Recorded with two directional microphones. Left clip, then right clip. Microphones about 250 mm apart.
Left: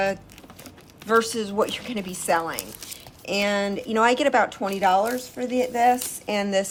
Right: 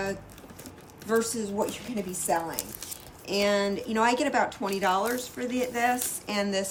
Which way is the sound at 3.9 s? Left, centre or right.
Centre.